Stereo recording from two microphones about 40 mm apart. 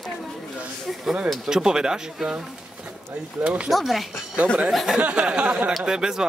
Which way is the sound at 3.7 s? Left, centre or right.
Centre.